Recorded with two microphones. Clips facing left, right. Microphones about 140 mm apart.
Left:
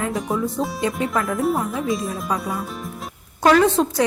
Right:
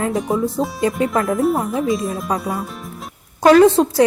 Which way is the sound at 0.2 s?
Centre (ahead or behind).